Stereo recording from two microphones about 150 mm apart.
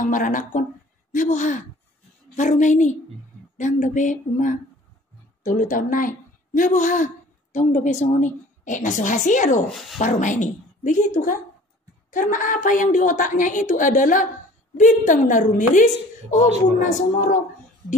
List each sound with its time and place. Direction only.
0.0 s a woman's voice: 60° left (ahead or behind)
9.7 s speech: centre (ahead or behind)
9.9 s a woman's voice: 55° left (ahead or behind)